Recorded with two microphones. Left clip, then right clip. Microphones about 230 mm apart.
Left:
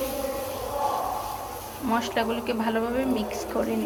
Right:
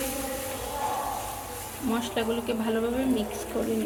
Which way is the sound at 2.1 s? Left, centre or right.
Centre.